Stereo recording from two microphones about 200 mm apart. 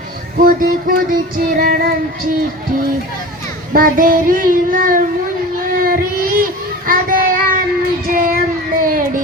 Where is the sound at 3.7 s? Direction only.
45° right (ahead or behind).